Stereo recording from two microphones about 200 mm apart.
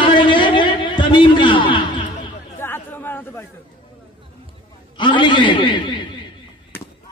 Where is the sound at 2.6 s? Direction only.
10° left (ahead or behind).